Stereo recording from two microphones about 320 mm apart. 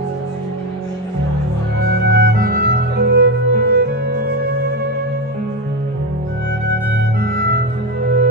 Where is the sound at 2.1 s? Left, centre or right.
Right.